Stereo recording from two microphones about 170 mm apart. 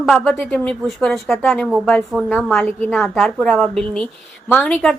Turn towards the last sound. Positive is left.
turn(degrees=10)  # may be behind; listen again after turning